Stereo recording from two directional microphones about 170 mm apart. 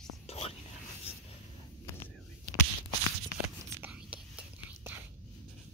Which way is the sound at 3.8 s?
5° right (ahead or behind).